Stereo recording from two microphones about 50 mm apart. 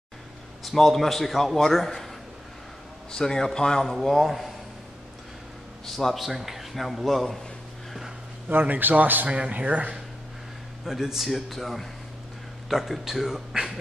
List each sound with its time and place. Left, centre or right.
0.7 s a man's voice: centre
3.1 s a man's voice: centre
3.8 s a man's voice: centre
5.9 s a man's voice: centre
8.5 s a man's voice: right
9.3 s speech: right
10.9 s a man's voice: centre